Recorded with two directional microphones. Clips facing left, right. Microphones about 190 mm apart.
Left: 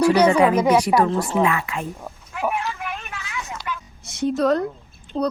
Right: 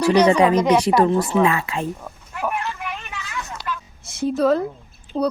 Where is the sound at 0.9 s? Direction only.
15° right (ahead or behind).